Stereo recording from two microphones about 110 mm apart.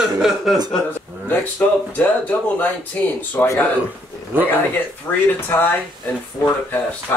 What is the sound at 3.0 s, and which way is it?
Speech, 15° left (ahead or behind).